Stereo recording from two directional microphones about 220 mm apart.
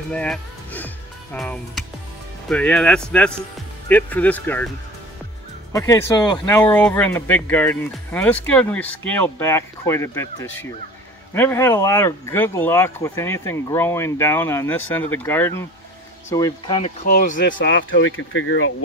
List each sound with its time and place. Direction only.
0.1 s speech: 5° left (ahead or behind)
5.7 s speech: 15° left (ahead or behind)
17.0 s speech: 40° left (ahead or behind)
17.6 s speech: 55° left (ahead or behind)